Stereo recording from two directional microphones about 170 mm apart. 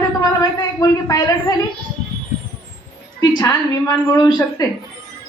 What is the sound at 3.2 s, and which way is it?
A woman's voice, 20° left (ahead or behind).